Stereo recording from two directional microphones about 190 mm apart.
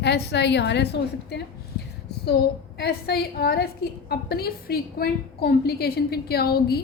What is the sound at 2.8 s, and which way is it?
A woman's voice, 60° left (ahead or behind).